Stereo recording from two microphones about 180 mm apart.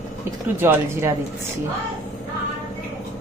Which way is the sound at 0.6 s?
15° right (ahead or behind).